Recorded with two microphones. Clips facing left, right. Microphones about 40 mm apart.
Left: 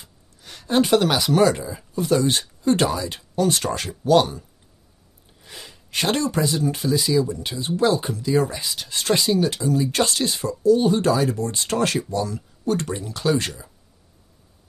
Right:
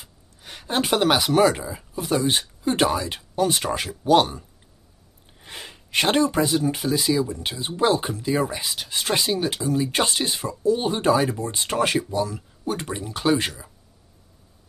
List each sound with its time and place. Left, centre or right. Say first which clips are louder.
0.0 s a sound: right 1 dB; right
0.7 s speech: left 2 dB; centre
5.4 s speech: right 3 dB; right